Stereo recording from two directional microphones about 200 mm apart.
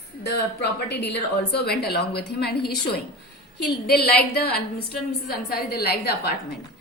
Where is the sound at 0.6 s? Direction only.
55° left (ahead or behind).